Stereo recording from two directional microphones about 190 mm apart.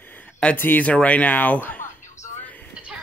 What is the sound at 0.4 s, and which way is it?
A man's voice, 10° left (ahead or behind).